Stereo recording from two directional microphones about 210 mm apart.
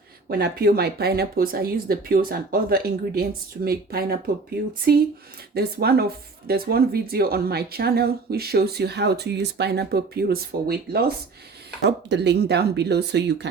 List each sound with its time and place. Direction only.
0.3 s speech: 45° right (ahead or behind)